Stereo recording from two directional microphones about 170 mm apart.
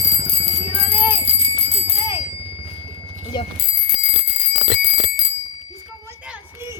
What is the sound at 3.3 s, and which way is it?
Speech, 25° left (ahead or behind).